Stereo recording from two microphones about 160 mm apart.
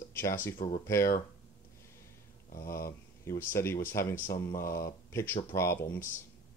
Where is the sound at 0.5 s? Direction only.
55° left (ahead or behind).